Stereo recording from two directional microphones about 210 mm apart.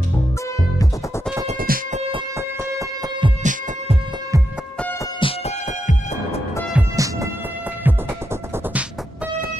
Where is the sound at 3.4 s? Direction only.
35° right (ahead or behind).